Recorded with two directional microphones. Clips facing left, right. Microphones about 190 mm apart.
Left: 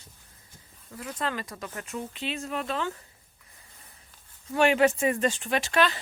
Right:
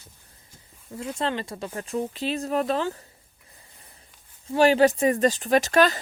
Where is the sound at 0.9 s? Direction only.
25° right (ahead or behind).